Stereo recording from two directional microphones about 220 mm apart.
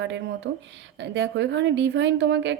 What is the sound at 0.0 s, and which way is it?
A woman's voice, 55° right (ahead or behind).